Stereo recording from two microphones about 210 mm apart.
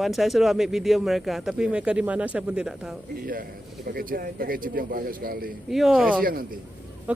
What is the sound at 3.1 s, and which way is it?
A man's voice, 45° right (ahead or behind).